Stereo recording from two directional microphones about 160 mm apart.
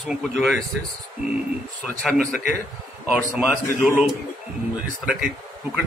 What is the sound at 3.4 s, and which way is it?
Speech, 5° right (ahead or behind).